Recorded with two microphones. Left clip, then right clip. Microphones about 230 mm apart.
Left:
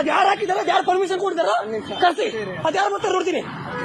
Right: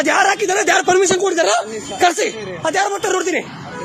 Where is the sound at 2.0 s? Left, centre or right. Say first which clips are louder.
Right 4 dB; right.